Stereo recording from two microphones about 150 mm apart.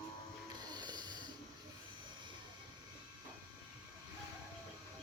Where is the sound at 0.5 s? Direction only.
30° right (ahead or behind).